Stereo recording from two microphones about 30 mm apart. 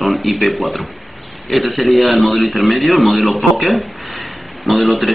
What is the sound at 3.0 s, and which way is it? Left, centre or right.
A man's voice, centre.